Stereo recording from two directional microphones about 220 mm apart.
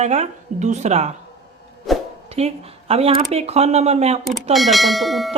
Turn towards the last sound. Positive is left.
turn(degrees=0)  # may be behind; listen again after turning